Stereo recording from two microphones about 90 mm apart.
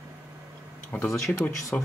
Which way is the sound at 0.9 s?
20° left (ahead or behind).